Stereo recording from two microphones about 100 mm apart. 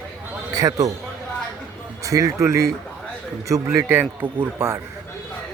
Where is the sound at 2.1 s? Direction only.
35° right (ahead or behind).